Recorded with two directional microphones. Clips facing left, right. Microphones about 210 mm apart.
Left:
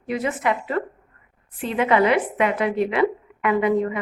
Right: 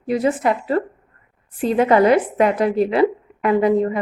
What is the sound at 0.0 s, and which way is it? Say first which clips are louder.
A woman's voice: right 5 dB; 35° right (ahead or behind).